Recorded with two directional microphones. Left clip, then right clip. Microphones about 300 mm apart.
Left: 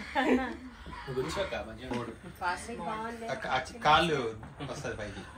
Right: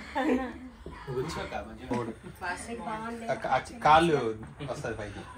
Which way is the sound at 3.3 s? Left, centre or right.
Right.